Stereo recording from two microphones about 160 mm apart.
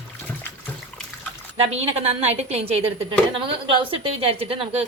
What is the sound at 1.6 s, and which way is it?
A woman's voice, 40° right (ahead or behind).